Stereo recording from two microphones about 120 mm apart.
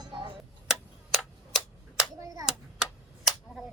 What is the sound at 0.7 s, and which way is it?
Tick-tock, 5° right (ahead or behind).